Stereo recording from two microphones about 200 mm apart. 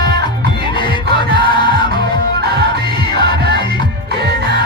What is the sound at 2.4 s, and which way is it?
Music, 55° right (ahead or behind).